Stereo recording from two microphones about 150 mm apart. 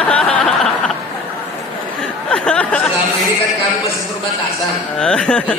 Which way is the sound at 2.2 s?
5° left (ahead or behind).